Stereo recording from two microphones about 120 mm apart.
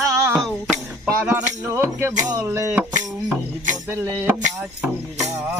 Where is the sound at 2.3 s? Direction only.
20° right (ahead or behind).